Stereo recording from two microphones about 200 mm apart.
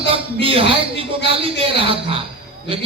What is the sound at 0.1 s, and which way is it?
A man's voice, 25° right (ahead or behind).